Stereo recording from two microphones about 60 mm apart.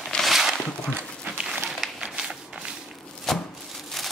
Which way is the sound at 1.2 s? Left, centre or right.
Centre.